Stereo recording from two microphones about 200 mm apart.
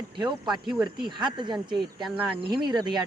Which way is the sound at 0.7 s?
Centre (ahead or behind).